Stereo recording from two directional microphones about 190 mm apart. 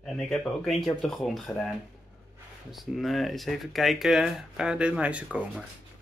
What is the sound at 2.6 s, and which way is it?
Speech, centre (ahead or behind).